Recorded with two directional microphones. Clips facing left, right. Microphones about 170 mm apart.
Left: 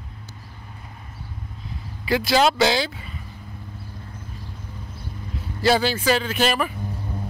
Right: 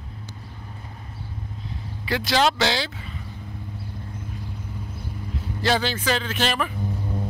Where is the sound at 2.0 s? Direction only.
10° left (ahead or behind).